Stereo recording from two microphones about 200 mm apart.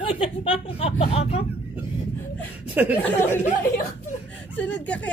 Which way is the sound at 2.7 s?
10° right (ahead or behind).